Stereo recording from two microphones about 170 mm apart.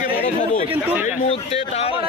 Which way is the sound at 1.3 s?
35° left (ahead or behind).